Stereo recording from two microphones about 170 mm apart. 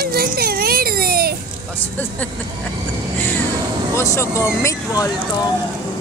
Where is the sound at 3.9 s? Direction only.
15° left (ahead or behind).